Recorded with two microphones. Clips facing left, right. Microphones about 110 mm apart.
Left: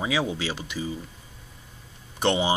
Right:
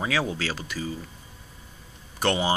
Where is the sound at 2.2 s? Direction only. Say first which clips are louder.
Left 1 dB; 20° left (ahead or behind).